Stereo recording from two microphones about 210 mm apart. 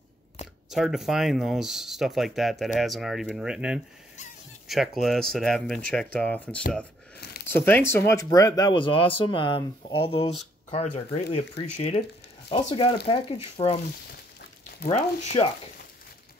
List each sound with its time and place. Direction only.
0.7 s speech: centre (ahead or behind); by 13.7 s 30° left (ahead or behind)
14.9 s speech: 25° left (ahead or behind)